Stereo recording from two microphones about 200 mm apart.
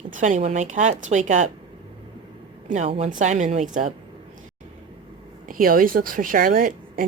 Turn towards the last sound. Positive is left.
turn(degrees=-45)  # may be behind; listen again after turning